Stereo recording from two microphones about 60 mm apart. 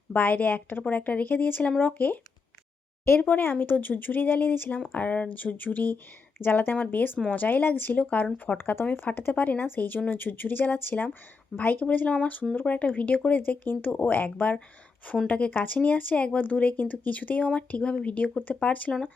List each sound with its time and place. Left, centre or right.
0.1 s speech: left
3.2 s speech: left